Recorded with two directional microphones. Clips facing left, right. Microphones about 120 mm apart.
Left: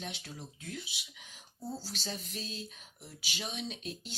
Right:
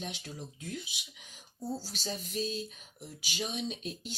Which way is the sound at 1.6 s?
10° right (ahead or behind).